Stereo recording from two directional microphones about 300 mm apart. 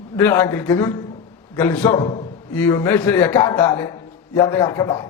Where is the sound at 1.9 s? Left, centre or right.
Centre.